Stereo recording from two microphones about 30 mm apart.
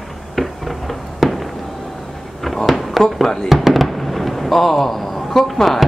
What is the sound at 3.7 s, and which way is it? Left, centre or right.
Fireworks, centre.